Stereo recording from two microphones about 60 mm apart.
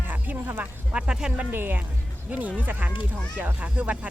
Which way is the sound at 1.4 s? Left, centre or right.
Right.